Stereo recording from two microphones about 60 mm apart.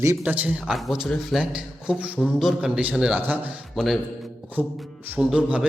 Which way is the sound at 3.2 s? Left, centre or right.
Right.